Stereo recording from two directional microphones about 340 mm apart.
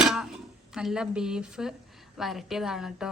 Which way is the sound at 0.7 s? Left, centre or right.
Centre.